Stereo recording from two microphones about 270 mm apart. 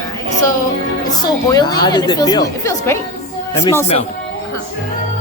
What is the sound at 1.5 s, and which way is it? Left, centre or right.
Speech, centre.